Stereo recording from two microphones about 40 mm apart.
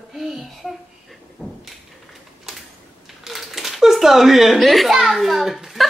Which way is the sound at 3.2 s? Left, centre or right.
Centre.